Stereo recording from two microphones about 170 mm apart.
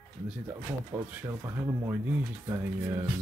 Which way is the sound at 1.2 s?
20° right (ahead or behind).